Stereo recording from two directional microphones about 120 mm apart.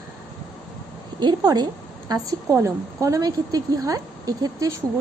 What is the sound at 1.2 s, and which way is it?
A woman's voice, 35° right (ahead or behind).